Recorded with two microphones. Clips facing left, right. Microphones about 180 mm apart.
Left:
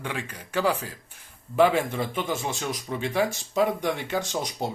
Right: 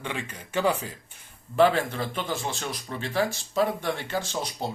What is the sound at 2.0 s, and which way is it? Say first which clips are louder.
Speech: left 2 dB; 20° left (ahead or behind).